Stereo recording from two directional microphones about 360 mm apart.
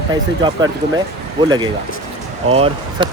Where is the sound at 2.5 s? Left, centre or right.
Centre.